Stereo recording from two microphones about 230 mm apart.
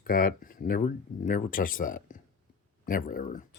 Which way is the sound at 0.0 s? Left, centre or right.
Left.